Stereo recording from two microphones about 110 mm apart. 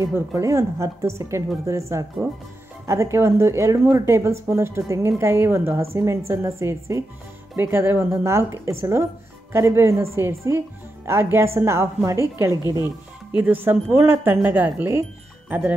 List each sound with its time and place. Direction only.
0.0 s a woman's voice: 30° right (ahead or behind)